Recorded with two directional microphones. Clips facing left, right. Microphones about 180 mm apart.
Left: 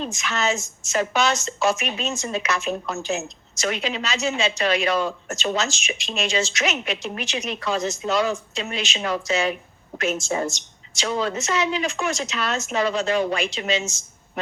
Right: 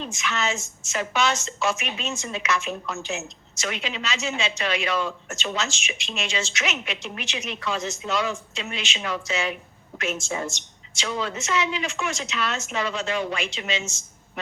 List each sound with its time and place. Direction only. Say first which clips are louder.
0.0 s a woman's voice: left 3 dB; 40° left (ahead or behind)